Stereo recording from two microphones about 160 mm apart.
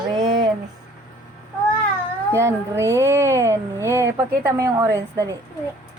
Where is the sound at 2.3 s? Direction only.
15° right (ahead or behind).